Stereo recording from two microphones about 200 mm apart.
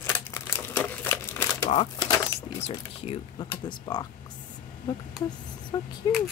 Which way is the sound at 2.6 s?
30° left (ahead or behind).